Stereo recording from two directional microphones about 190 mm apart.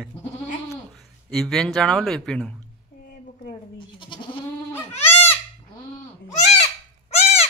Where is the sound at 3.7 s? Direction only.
25° left (ahead or behind).